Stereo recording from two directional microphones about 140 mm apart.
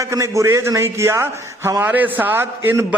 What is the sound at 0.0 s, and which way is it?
A man's voice, 20° right (ahead or behind).